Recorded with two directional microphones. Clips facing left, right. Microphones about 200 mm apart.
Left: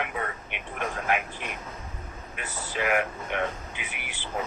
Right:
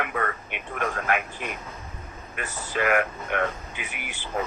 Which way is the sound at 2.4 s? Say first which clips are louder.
Right 3 dB; 50° right (ahead or behind).